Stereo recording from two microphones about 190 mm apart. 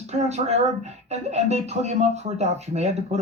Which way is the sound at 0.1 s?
35° right (ahead or behind).